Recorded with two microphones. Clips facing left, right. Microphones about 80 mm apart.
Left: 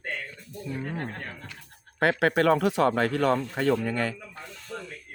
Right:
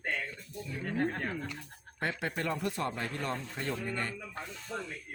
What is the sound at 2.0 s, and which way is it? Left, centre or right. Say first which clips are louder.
Speech: left 12 dB; left.